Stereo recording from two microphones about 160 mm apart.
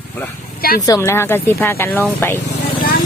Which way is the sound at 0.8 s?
20° left (ahead or behind).